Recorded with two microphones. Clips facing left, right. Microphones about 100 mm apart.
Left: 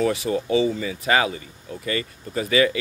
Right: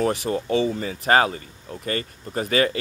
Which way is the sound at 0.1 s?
50° right (ahead or behind).